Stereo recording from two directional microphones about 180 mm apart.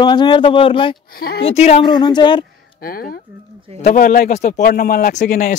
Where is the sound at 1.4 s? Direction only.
35° left (ahead or behind).